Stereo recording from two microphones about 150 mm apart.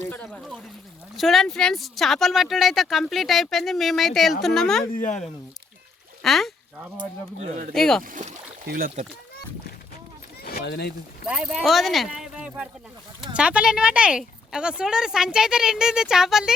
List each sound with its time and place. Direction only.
0.0 s speech: 10° left (ahead or behind)
4.9 s speech: 55° left (ahead or behind)
6.2 s speech: centre (ahead or behind)
7.7 s speech: 5° left (ahead or behind)
8.0 s speech: 65° right (ahead or behind)
10.4 s a sound: 90° left
11.3 s speech: 5° right (ahead or behind)